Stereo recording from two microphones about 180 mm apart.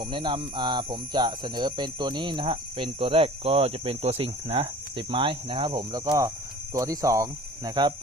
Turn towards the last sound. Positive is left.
turn(degrees=-20)  # may be behind; listen again after turning